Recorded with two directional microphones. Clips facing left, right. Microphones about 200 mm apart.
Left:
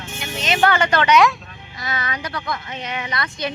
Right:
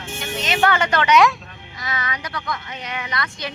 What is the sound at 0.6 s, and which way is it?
Speech, 35° left (ahead or behind).